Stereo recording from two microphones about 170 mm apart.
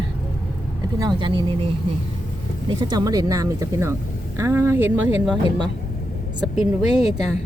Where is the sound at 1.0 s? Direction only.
25° right (ahead or behind).